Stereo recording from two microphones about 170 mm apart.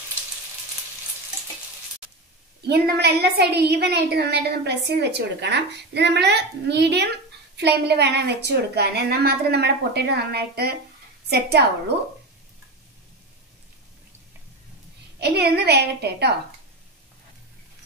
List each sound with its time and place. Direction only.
2.7 s a woman's voice: 75° right (ahead or behind)
15.1 s a woman's voice: 75° right (ahead or behind)